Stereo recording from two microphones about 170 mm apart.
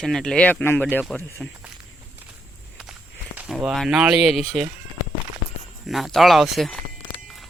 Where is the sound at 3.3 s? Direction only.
5° right (ahead or behind).